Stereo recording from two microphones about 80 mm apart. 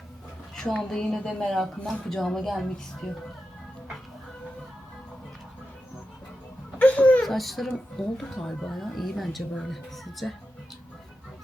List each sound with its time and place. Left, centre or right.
0.5 s a woman's voice: centre
6.7 s a sound: centre
7.2 s a woman's voice: centre